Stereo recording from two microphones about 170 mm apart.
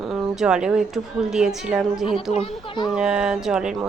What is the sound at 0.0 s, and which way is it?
Speech, centre (ahead or behind).